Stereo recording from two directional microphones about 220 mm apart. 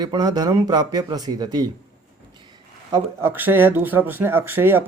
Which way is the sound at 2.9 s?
10° right (ahead or behind).